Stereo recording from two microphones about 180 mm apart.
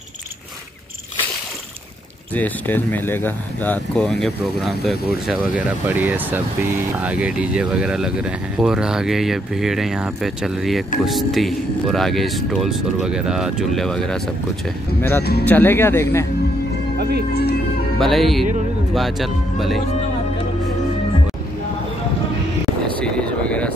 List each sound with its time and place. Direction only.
2.3 s speech: 10° left (ahead or behind)
17.3 s music: 60° left (ahead or behind)
17.9 s speech: centre (ahead or behind)
22.9 s vehicle: 5° left (ahead or behind)